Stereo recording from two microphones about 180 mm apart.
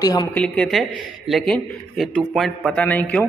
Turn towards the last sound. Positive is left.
turn(degrees=5)  # may be behind; listen again after turning